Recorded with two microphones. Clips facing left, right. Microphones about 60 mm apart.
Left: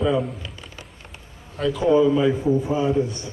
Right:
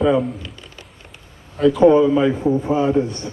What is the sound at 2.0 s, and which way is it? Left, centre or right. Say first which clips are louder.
Speech: right 2 dB; centre.